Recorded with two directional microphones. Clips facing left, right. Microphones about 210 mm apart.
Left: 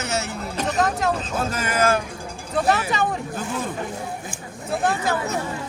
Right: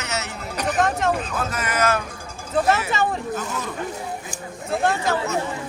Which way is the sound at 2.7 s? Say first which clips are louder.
Left 2 dB; centre (ahead or behind).